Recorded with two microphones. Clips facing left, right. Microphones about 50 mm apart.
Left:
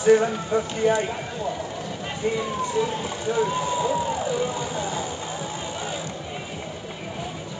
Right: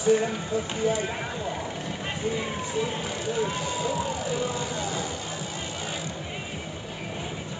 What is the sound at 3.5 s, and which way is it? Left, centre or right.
Speech, centre.